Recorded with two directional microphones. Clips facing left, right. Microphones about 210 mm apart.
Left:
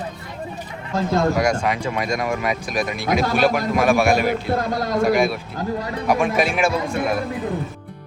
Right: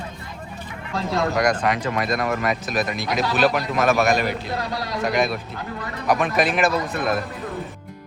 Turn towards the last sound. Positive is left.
turn(degrees=10)  # may be behind; listen again after turning